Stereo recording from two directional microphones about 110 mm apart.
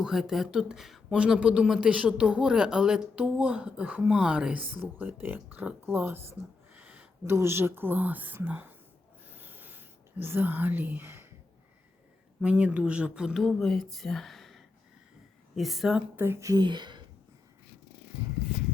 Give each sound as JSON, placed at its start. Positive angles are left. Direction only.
{"t": 0.0, "sound": "speech", "side_deg": -5}
{"t": 6.7, "sound": "a sound", "side_deg": -10}
{"t": 7.3, "sound": "speech", "side_deg": -20}
{"t": 9.3, "sound": "whispering", "side_deg": -15}
{"t": 12.4, "sound": "speech", "side_deg": -10}
{"t": 16.1, "sound": "speech", "side_deg": -20}
{"t": 16.6, "sound": "speech", "side_deg": -40}